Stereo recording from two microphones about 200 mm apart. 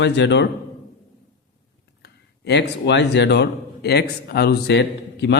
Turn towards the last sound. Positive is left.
turn(degrees=60)  # may be behind; listen again after turning